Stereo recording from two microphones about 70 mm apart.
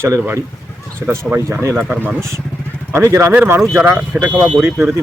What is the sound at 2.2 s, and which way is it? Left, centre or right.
Speech, right.